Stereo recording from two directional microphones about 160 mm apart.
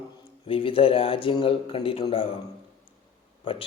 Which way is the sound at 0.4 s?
35° left (ahead or behind).